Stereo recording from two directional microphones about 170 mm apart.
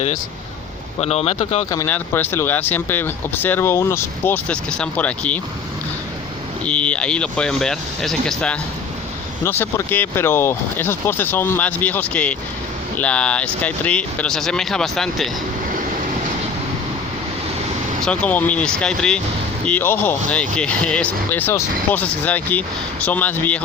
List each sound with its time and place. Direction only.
1.0 s speech: 40° left (ahead or behind)
1.7 s speech: 15° left (ahead or behind)
6.7 s speech: 5° left (ahead or behind)
9.4 s speech: 15° left (ahead or behind)
18.0 s speech: 5° left (ahead or behind)